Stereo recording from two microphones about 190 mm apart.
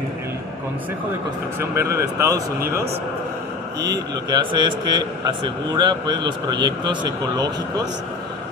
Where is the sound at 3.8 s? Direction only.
20° right (ahead or behind).